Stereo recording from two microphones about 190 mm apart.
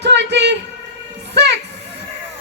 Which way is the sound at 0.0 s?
65° right (ahead or behind).